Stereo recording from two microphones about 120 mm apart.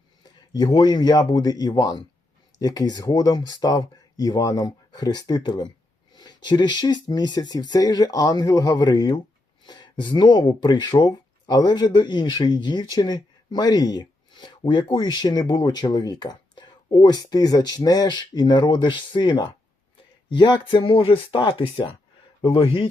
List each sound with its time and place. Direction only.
0.5 s speech: 35° left (ahead or behind)